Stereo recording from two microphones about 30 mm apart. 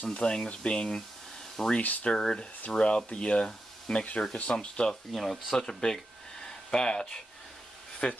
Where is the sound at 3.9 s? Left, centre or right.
Centre.